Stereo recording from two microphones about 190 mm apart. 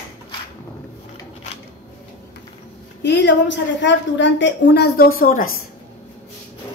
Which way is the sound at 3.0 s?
65° left (ahead or behind).